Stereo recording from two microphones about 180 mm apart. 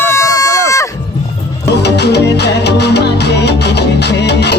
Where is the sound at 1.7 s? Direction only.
70° left (ahead or behind).